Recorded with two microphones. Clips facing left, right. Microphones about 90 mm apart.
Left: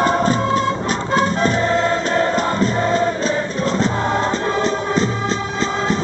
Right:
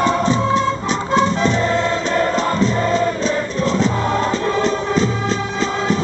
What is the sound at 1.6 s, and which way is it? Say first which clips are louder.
Music: left 1 dB; centre (ahead or behind).